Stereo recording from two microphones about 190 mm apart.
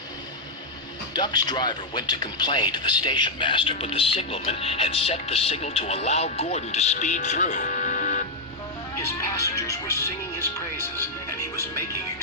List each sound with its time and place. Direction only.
1.1 s speech: 20° left (ahead or behind); by 8.2 s 40° left (ahead or behind)
9.0 s music: 15° left (ahead or behind)